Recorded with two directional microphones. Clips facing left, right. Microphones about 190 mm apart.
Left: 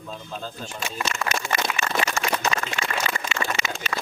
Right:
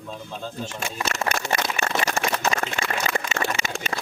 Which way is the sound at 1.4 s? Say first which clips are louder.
Right 1 dB; 40° right (ahead or behind).